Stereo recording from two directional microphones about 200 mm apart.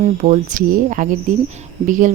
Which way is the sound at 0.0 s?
40° right (ahead or behind).